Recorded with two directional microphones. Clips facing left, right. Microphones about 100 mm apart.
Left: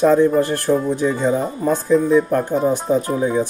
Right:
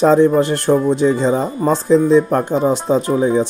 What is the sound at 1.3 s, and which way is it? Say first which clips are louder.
Speech: right 3 dB; 90° right.